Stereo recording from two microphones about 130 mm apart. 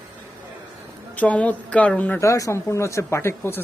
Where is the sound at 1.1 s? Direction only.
10° left (ahead or behind).